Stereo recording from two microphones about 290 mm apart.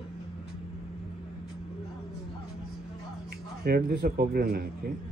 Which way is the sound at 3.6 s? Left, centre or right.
Right.